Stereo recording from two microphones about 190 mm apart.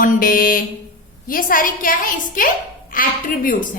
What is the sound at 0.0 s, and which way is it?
A woman's voice, 50° left (ahead or behind).